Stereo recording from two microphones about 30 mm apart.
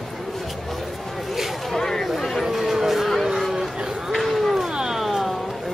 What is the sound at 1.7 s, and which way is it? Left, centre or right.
Chatter, centre.